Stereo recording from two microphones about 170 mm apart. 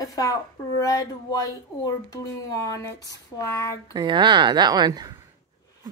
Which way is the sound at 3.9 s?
25° right (ahead or behind).